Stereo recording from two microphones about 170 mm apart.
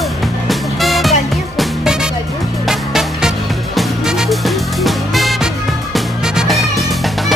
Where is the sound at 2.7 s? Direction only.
Centre (ahead or behind).